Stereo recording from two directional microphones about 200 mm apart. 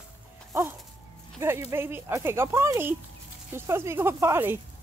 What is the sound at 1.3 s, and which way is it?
Speech, 10° right (ahead or behind).